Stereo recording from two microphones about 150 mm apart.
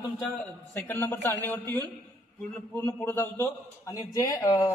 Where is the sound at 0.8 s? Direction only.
15° left (ahead or behind).